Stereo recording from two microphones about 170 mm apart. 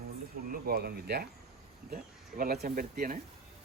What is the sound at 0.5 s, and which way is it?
Speech, 60° right (ahead or behind).